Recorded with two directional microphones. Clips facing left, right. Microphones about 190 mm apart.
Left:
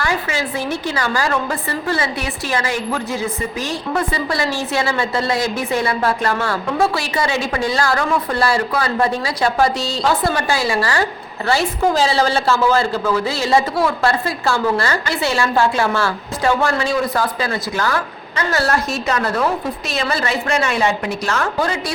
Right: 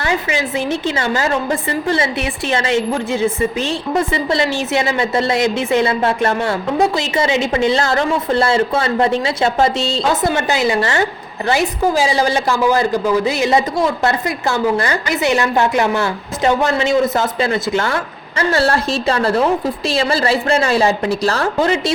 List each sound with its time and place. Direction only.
0.0 s a woman's voice: 20° right (ahead or behind)
11.8 s a woman's voice: 10° right (ahead or behind); by 21.5 s 35° right (ahead or behind)
21.6 s a woman's voice: 25° right (ahead or behind)